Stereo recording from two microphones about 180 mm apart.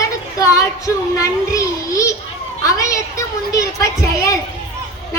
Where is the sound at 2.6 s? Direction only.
15° left (ahead or behind).